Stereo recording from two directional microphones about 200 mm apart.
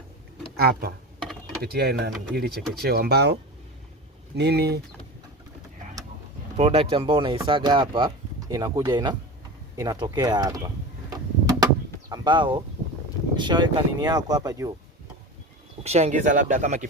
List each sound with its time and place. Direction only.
0.5 s speech: 50° right (ahead or behind)
4.4 s speech: 55° right (ahead or behind)
6.6 s speech: 30° right (ahead or behind)
11.1 s a sound: 20° right (ahead or behind)
13.4 s speech: 20° right (ahead or behind)
15.8 s speech: 35° right (ahead or behind)